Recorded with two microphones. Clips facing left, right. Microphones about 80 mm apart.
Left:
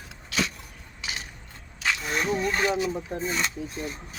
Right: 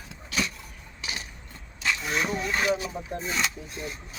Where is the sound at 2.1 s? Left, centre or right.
Centre.